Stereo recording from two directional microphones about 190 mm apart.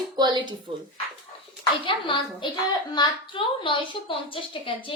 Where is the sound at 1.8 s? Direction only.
25° left (ahead or behind).